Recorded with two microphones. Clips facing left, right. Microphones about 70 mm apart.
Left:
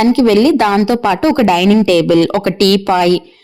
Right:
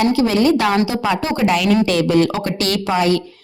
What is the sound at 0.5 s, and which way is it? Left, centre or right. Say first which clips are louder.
Speech: left 5 dB; left.